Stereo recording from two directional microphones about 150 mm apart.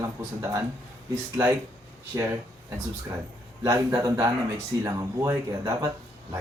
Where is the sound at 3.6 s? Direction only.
25° right (ahead or behind).